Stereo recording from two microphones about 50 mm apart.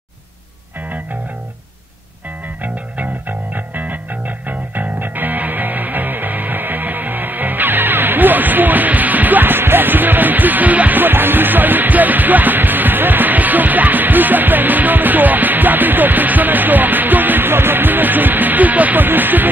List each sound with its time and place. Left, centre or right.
0.7 s music: right
2.6 s music: right